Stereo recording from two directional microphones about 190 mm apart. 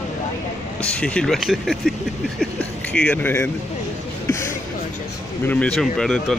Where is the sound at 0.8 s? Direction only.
5° left (ahead or behind).